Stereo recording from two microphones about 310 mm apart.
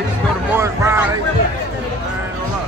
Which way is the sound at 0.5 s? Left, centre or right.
Centre.